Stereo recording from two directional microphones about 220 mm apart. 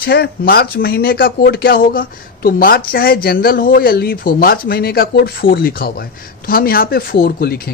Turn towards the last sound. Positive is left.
turn(degrees=40)  # may be behind; listen again after turning